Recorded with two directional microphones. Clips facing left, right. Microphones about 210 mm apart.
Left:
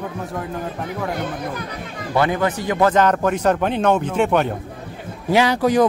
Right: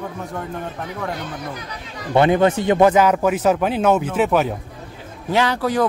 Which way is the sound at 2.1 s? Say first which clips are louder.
Right 4 dB; 25° right (ahead or behind).